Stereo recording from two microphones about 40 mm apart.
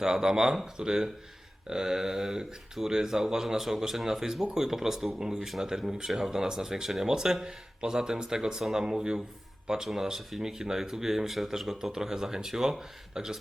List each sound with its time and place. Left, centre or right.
0.0 s speech: centre
6.1 s speech: centre
6.3 s speech: centre